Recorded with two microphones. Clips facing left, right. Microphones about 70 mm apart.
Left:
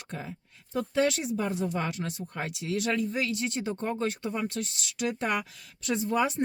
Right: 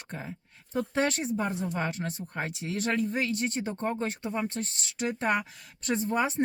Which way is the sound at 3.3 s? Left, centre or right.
Right.